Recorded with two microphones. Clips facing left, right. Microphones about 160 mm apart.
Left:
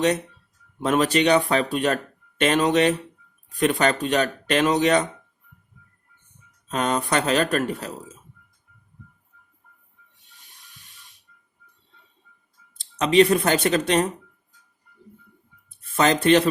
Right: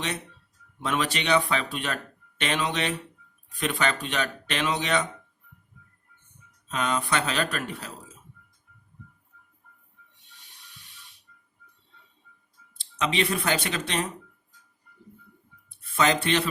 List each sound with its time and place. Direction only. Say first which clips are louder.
0.8 s speech: left 8 dB; 45° left (ahead or behind)
6.7 s speech: left 4 dB; 45° left (ahead or behind)
12.8 s speech: left 10 dB; 45° left (ahead or behind)
16.2 s speech: left 9 dB; 45° left (ahead or behind)